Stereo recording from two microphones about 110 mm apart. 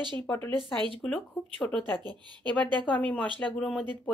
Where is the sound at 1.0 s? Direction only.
10° left (ahead or behind).